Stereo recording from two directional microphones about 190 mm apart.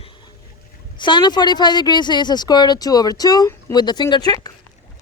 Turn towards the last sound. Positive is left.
turn(degrees=20)  # may be behind; listen again after turning